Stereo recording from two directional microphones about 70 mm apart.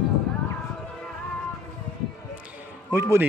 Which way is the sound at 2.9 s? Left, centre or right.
Right.